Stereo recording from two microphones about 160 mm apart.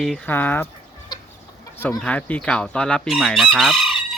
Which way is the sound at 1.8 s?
10° left (ahead or behind).